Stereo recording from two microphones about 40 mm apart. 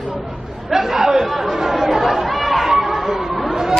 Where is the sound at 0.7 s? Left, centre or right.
Centre.